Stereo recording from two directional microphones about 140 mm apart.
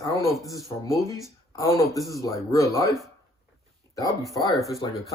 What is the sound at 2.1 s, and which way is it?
Speech, 25° left (ahead or behind).